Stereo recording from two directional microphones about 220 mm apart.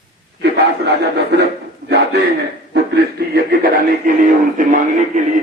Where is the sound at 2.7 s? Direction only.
45° right (ahead or behind).